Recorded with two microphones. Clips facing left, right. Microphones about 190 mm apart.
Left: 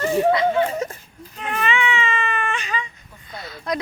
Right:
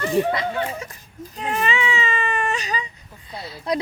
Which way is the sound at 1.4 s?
35° right (ahead or behind).